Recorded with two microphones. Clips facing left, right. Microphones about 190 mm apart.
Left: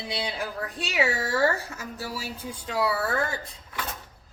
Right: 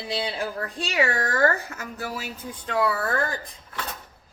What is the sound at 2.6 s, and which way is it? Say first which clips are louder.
Speech: right 2 dB; 5° left (ahead or behind).